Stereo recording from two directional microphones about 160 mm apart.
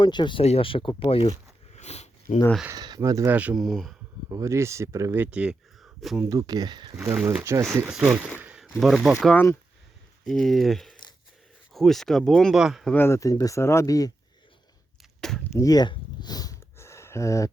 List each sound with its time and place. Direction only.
0.0 s speech: 30° left (ahead or behind)
1.7 s sniff: 45° left (ahead or behind)
2.6 s speech: 25° right (ahead or behind)
3.3 s speech: 5° right (ahead or behind)
4.3 s speech: 20° right (ahead or behind); by 6.2 s centre (ahead or behind)
6.2 s speech: 25° right (ahead or behind)
7.0 s speech: 10° right (ahead or behind)
7.9 s speech: 5° right (ahead or behind)
8.4 s a sound: 5° right (ahead or behind)
9.2 s speech: 10° left (ahead or behind)
10.2 s speech: centre (ahead or behind)
12.9 s speech: 15° left (ahead or behind)
15.2 s a sound: 5° left (ahead or behind)
15.5 s a sound: 25° left (ahead or behind)